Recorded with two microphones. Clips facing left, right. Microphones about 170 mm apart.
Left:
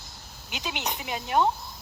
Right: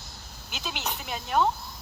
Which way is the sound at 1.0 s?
5° left (ahead or behind).